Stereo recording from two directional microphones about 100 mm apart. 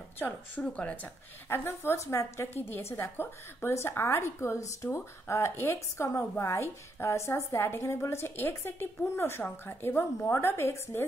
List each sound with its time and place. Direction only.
0.2 s speech: 10° left (ahead or behind)
1.5 s a woman's voice: 25° left (ahead or behind)